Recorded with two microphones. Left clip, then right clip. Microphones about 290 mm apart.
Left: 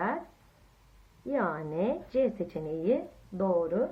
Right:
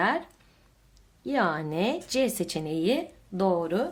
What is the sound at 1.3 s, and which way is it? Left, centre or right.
Speech, right.